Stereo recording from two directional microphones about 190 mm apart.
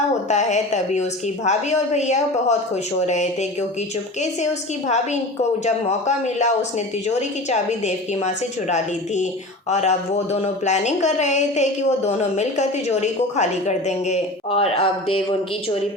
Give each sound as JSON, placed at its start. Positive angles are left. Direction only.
{"t": 0.3, "sound": "speech", "side_deg": 40}
{"t": 5.6, "sound": "speech", "side_deg": 35}
{"t": 9.6, "sound": "speech", "side_deg": 35}